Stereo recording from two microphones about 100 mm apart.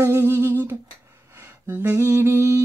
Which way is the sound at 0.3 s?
25° right (ahead or behind).